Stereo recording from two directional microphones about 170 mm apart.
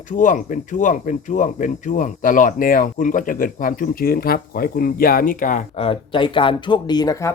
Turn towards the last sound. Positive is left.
turn(degrees=20)  # may be behind; listen again after turning